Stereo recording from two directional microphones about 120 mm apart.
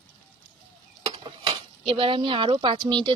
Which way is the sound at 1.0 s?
50° right (ahead or behind).